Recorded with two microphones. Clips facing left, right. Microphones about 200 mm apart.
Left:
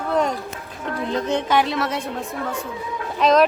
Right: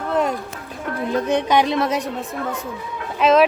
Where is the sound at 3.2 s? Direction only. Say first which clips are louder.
Right 1 dB; 5° right (ahead or behind).